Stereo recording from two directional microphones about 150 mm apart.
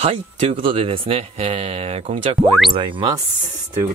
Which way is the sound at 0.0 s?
40° right (ahead or behind).